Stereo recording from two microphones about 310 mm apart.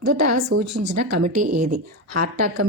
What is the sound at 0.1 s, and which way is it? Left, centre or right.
Speech, right.